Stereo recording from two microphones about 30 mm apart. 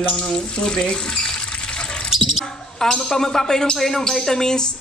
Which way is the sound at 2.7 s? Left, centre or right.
Centre.